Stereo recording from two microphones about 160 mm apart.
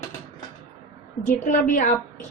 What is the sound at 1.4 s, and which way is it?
Speech, 50° left (ahead or behind).